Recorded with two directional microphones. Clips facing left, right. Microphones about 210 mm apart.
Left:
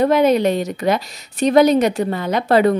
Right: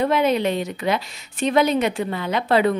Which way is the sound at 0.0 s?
40° left (ahead or behind).